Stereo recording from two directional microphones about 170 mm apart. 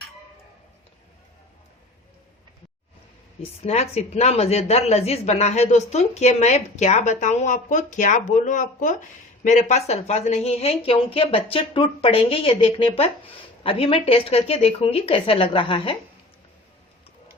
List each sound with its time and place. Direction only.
3.6 s speech: 40° left (ahead or behind)